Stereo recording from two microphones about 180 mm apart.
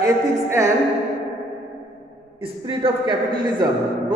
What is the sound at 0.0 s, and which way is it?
Speech, 15° right (ahead or behind).